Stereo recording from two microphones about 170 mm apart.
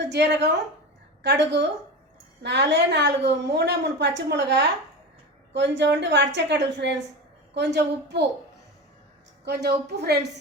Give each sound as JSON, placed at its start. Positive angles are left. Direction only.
{"t": 0.0, "sound": "a woman's voice", "side_deg": -80}
{"t": 9.4, "sound": "a woman's voice", "side_deg": -75}